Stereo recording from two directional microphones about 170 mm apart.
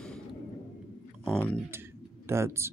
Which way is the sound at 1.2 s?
5° left (ahead or behind).